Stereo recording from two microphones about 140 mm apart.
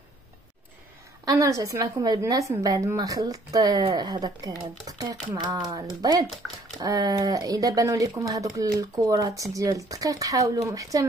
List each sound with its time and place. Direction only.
1.2 s a woman's voice: 25° right (ahead or behind)